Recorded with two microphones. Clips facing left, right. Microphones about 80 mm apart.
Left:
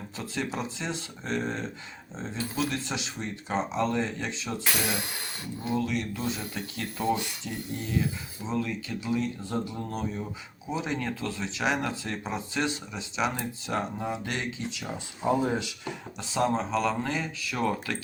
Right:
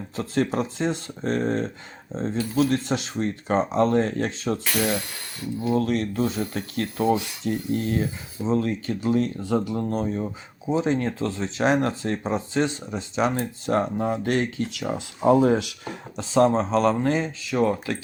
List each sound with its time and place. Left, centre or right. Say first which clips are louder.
0.2 s speech: right 8 dB; right
5.6 s speech: right 6 dB; right
8.4 s speech: right 7 dB; right
9.5 s speech: right 8 dB; right
9.9 s speech: right 7 dB; right
15.3 s speech: right 8 dB; right
15.8 s speech: right 3 dB; right